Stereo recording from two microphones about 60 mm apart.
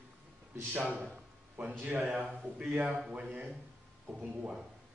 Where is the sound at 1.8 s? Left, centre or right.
Right.